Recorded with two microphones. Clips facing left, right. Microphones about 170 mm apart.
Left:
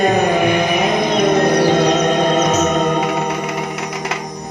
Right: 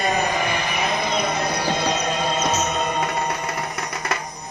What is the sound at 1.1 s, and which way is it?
Music, 90° left.